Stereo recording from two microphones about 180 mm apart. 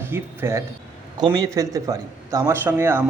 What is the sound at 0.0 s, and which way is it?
Speech, 15° right (ahead or behind).